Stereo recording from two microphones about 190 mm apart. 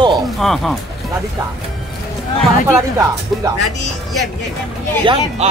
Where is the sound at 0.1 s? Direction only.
Centre (ahead or behind).